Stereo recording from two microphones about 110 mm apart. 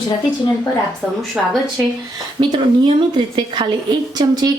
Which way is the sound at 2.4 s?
45° right (ahead or behind).